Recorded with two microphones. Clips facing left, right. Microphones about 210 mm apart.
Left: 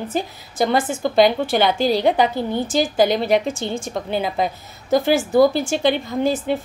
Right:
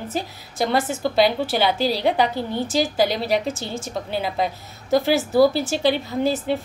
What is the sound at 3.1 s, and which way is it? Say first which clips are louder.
Speech: left 4 dB; 50° left (ahead or behind).